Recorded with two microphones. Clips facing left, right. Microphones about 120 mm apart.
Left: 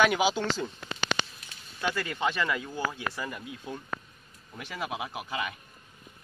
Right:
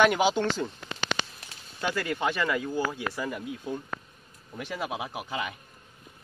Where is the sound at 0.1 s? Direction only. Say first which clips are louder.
Right 2 dB; 20° right (ahead or behind).